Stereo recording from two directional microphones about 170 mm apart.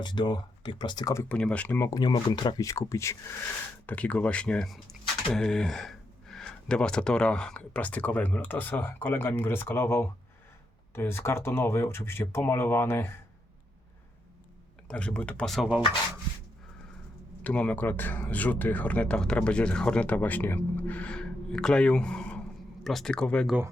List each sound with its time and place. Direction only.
0.0 s speech: 25° left (ahead or behind)
14.8 s speech: 5° left (ahead or behind)
17.4 s speech: 5° left (ahead or behind)